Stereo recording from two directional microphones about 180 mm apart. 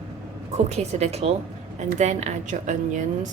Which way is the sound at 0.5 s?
35° right (ahead or behind).